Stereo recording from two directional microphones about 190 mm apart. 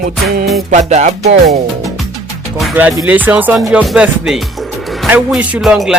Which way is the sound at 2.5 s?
5° right (ahead or behind).